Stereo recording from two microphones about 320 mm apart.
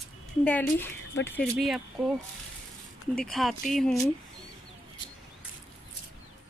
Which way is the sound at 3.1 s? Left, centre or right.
Centre.